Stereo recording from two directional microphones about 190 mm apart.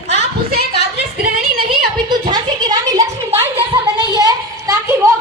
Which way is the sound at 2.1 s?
20° right (ahead or behind).